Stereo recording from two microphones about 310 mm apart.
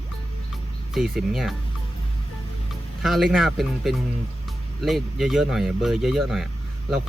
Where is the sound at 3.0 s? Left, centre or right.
Centre.